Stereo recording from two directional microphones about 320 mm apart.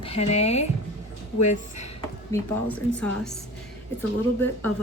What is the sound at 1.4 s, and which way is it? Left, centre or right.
Speech, left.